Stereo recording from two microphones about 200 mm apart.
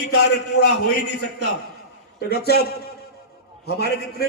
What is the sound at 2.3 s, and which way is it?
Speech, 55° left (ahead or behind).